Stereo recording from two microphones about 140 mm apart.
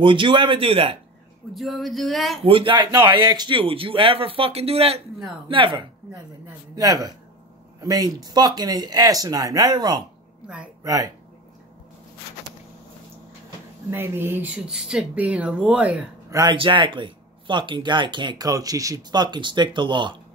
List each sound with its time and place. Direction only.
0.0 s speech: 35° right (ahead or behind)
1.5 s speech: centre (ahead or behind)
2.4 s speech: 40° right (ahead or behind)
10.4 s speech: 10° right (ahead or behind)
10.8 s speech: 25° right (ahead or behind)
13.8 s speech: 15° right (ahead or behind)
16.3 s speech: 25° right (ahead or behind)
16.5 s speech: 35° right (ahead or behind)